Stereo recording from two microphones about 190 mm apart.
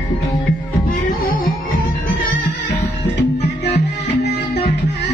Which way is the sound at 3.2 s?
65° left (ahead or behind).